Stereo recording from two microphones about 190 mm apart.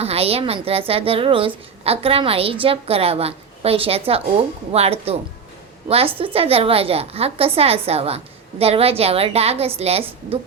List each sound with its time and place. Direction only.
0.0 s a woman's voice: 30° right (ahead or behind)